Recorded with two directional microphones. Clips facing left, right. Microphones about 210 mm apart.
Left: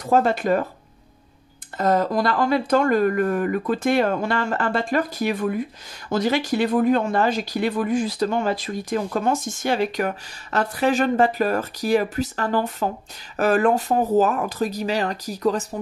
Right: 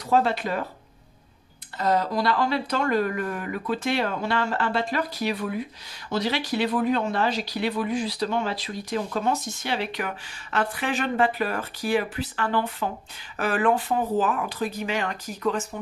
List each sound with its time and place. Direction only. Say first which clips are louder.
0.0 s speech: left 3 dB; 45° left (ahead or behind)
1.8 s speech: left 4 dB; 50° left (ahead or behind)